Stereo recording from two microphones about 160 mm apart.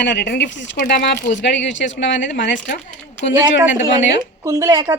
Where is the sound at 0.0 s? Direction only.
90° left.